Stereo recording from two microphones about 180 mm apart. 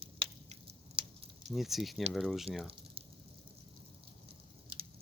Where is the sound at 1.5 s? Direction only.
Centre (ahead or behind).